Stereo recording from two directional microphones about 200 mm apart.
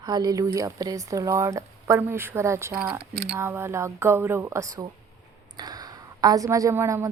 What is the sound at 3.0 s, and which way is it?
Speech, 55° right (ahead or behind).